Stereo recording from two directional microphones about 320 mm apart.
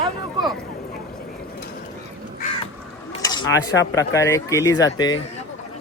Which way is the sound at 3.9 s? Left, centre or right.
Centre.